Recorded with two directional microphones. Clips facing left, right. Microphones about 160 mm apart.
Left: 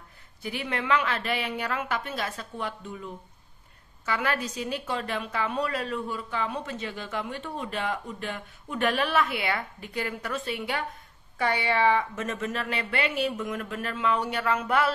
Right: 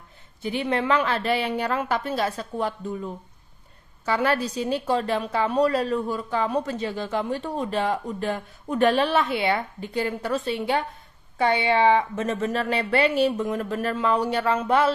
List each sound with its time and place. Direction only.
0.4 s a woman's voice: 25° right (ahead or behind)